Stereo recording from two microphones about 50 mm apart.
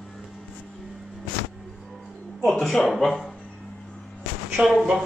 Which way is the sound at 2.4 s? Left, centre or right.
Centre.